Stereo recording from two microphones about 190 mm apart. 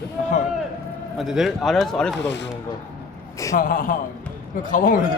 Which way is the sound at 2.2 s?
65° left (ahead or behind).